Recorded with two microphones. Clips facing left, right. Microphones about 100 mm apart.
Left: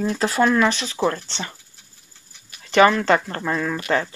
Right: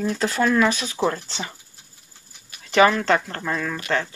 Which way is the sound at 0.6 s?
10° right (ahead or behind).